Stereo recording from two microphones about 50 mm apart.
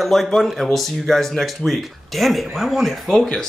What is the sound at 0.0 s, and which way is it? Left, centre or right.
Speech, centre.